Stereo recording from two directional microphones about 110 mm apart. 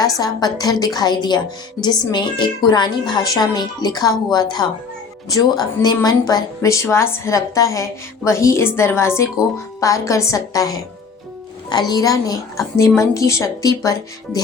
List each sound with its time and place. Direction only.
0.0 s a woman's voice: 35° left (ahead or behind)